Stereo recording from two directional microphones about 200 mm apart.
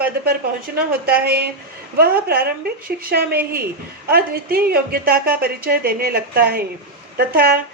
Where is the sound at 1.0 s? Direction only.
50° right (ahead or behind).